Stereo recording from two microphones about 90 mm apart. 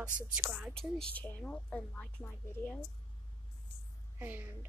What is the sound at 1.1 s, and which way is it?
Speech, 20° left (ahead or behind).